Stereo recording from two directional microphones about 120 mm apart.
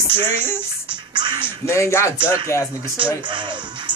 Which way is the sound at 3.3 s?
40° right (ahead or behind).